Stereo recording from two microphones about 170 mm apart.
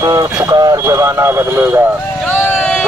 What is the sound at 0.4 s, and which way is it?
Speech, 20° right (ahead or behind).